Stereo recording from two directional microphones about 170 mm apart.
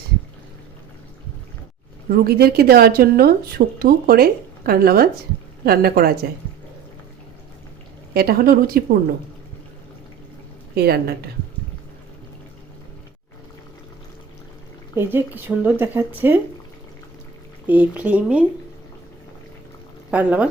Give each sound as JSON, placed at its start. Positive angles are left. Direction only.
{"t": 2.0, "sound": "speech", "side_deg": -65}
{"t": 8.1, "sound": "speech", "side_deg": -65}
{"t": 10.8, "sound": "a woman's voice", "side_deg": -65}
{"t": 14.9, "sound": "speech", "side_deg": -10}
{"t": 17.7, "sound": "speech", "side_deg": -10}
{"t": 20.1, "sound": "speech", "side_deg": -10}